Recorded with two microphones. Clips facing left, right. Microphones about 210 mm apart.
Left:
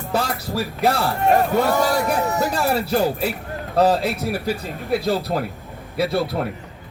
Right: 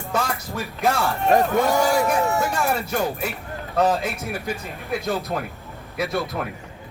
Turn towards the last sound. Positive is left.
turn(degrees=30)  # may be behind; listen again after turning